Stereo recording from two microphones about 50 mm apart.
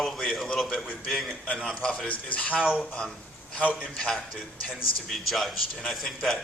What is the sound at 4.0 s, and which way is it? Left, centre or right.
Speech, centre.